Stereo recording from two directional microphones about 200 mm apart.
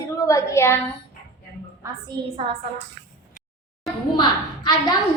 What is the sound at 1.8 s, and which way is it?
Speech, 25° right (ahead or behind).